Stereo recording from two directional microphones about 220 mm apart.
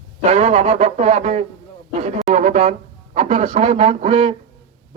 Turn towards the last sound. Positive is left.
turn(degrees=-25)  # may be behind; listen again after turning